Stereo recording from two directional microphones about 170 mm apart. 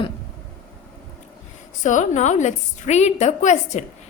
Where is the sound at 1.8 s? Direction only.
45° left (ahead or behind).